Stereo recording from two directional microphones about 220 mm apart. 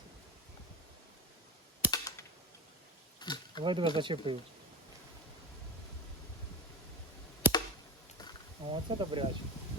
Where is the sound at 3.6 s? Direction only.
20° right (ahead or behind).